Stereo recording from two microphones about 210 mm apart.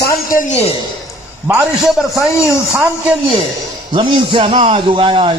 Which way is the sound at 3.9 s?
25° right (ahead or behind).